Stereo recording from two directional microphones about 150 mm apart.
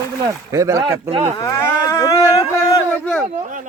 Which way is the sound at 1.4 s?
20° left (ahead or behind).